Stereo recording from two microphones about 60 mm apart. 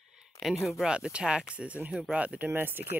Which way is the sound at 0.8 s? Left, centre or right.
Centre.